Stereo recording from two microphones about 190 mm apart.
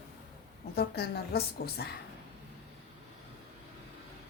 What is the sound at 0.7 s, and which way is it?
A woman's voice, 60° left (ahead or behind).